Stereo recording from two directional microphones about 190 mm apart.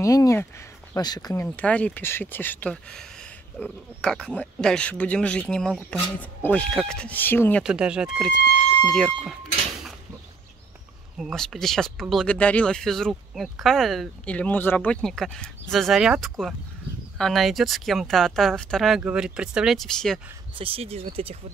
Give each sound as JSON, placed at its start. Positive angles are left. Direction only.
{"t": 0.0, "sound": "speech", "side_deg": 15}
{"t": 7.6, "sound": "speech", "side_deg": -5}
{"t": 11.1, "sound": "speech", "side_deg": 0}
{"t": 20.5, "sound": "speech", "side_deg": -30}